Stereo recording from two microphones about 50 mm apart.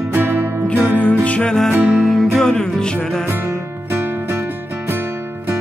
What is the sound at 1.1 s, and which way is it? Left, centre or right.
Music, left.